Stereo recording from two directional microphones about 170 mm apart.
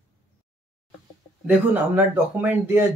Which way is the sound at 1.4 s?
10° right (ahead or behind).